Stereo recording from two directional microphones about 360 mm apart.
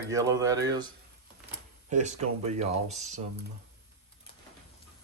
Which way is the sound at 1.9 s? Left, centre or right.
Centre.